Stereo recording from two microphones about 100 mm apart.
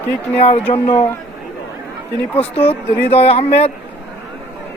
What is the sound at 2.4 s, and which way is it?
Speech, 80° left.